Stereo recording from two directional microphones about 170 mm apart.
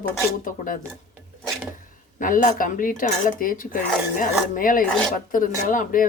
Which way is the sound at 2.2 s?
50° left (ahead or behind).